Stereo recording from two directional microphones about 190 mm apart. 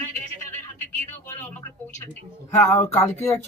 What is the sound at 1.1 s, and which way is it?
Speech, 10° left (ahead or behind).